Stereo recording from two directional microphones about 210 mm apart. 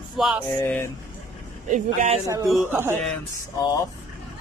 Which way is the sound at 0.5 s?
10° left (ahead or behind).